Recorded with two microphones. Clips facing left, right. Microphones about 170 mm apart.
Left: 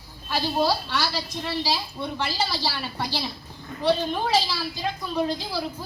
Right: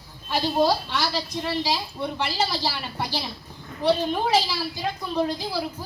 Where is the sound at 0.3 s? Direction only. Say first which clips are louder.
Right 2 dB; 15° right (ahead or behind).